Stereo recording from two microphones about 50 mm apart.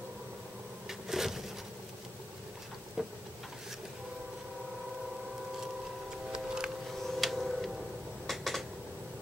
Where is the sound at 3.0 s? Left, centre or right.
Centre.